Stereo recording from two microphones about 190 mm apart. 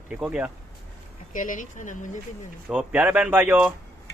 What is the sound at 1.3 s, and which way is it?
Speech, 45° left (ahead or behind).